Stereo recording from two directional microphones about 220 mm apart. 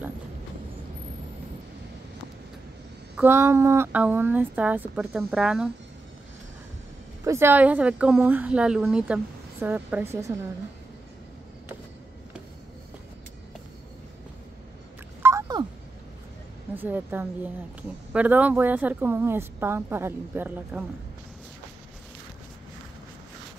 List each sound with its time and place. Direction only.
3.2 s a woman's voice: 10° right (ahead or behind)
7.2 s a woman's voice: 10° right (ahead or behind)
15.2 s a sound: 15° right (ahead or behind)
16.7 s a woman's voice: 10° right (ahead or behind)